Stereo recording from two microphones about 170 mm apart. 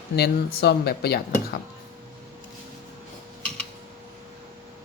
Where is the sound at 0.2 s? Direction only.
75° left (ahead or behind).